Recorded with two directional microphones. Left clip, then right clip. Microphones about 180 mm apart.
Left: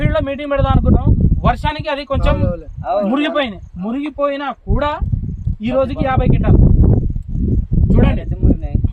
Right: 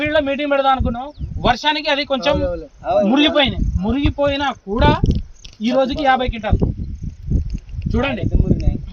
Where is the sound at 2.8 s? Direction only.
15° right (ahead or behind).